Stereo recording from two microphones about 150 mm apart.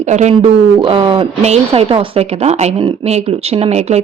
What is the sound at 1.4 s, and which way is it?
Speech, 45° right (ahead or behind).